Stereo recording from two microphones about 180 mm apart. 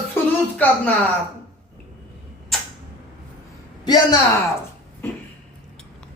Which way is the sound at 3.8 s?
25° left (ahead or behind).